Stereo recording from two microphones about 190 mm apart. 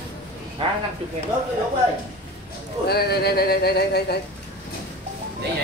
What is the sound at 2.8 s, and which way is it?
Speech, 55° left (ahead or behind).